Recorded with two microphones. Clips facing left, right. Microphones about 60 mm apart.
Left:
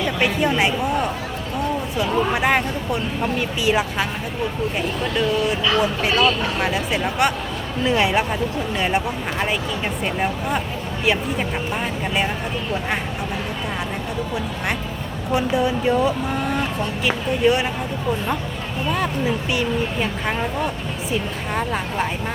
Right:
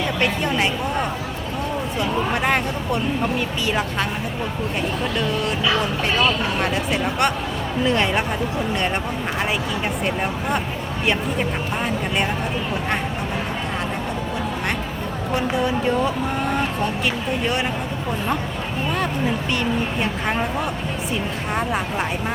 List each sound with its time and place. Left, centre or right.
0.2 s a woman's voice: centre
5.1 s speech: centre
15.5 s speech: centre
19.5 s a woman's voice: centre
20.2 s a woman's voice: centre